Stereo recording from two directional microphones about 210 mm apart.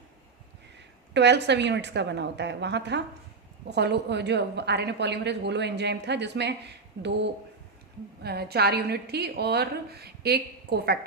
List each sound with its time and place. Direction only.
1.1 s a woman's voice: 55° right (ahead or behind)